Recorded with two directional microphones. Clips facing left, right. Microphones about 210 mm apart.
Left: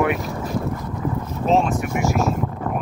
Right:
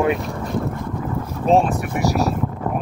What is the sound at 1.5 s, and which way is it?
Speech, 35° right (ahead or behind).